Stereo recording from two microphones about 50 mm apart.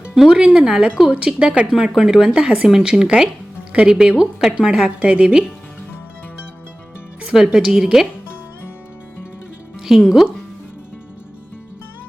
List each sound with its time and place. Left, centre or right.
0.1 s speech: centre
2.3 s a woman's voice: right
2.6 s a woman's voice: centre
7.3 s speech: centre
9.9 s speech: centre